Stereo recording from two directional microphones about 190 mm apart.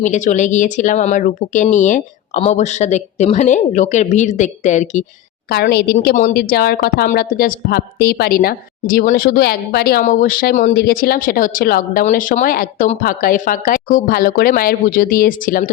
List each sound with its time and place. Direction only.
0.0 s speech: 40° left (ahead or behind)
5.5 s a woman's voice: 55° left (ahead or behind)